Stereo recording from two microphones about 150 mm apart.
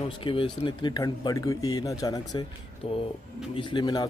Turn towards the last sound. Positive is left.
turn(degrees=30)  # may be behind; listen again after turning